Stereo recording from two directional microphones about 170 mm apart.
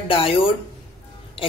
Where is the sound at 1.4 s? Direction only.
30° left (ahead or behind).